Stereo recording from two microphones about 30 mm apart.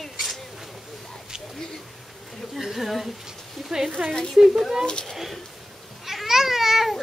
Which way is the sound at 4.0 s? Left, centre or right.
Right.